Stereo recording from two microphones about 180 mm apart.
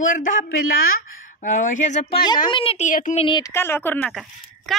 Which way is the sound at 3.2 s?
25° left (ahead or behind).